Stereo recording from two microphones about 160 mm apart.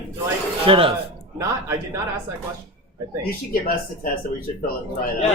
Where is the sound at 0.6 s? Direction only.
35° right (ahead or behind).